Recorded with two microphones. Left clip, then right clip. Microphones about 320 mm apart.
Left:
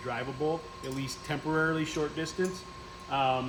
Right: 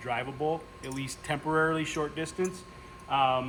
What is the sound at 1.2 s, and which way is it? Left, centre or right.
Speech, centre.